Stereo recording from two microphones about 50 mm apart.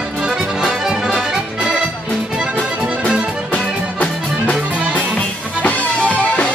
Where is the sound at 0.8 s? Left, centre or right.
Centre.